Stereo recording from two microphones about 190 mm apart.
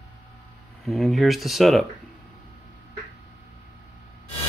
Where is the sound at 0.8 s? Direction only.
Centre (ahead or behind).